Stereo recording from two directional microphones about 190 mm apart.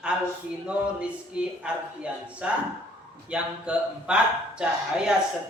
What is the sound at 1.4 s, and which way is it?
Speech, 5° right (ahead or behind).